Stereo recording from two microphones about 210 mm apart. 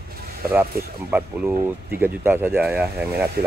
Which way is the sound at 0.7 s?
45° right (ahead or behind).